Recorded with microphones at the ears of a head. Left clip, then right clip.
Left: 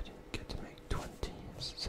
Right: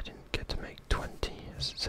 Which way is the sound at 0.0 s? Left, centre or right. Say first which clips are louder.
Right 7 dB; right.